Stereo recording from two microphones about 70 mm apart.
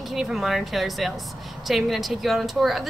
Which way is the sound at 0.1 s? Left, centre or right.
Centre.